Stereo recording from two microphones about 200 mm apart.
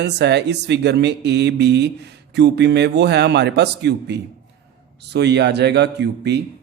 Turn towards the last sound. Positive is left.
turn(degrees=-60)  # may be behind; listen again after turning